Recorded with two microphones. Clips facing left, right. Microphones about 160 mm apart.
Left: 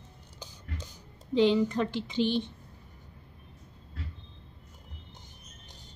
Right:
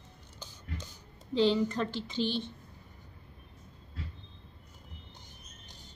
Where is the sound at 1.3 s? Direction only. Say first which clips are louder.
Left 3 dB; 15° left (ahead or behind).